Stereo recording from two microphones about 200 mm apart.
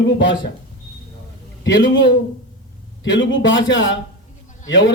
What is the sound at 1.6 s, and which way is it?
Speech, 65° left (ahead or behind).